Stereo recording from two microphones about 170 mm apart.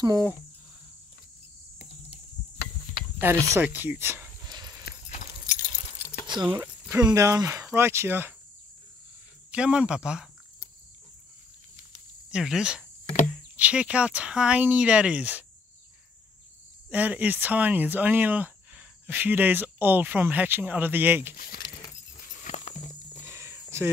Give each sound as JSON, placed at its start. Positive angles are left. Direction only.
{"t": 0.0, "sound": "speech", "side_deg": -20}
{"t": 3.2, "sound": "speech", "side_deg": -15}
{"t": 4.5, "sound": "horse", "side_deg": -25}
{"t": 6.2, "sound": "speech", "side_deg": -25}
{"t": 6.6, "sound": "a sound", "side_deg": -15}
{"t": 7.1, "sound": "speech", "side_deg": -20}
{"t": 9.5, "sound": "speech", "side_deg": -5}
{"t": 12.3, "sound": "speech", "side_deg": -5}
{"t": 16.9, "sound": "speech", "side_deg": -10}
{"t": 21.5, "sound": "a sound", "side_deg": 25}
{"t": 22.4, "sound": "walk", "side_deg": 45}
{"t": 23.2, "sound": "a sound", "side_deg": -15}